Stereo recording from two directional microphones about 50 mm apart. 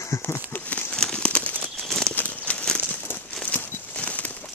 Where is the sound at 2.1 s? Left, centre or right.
Left.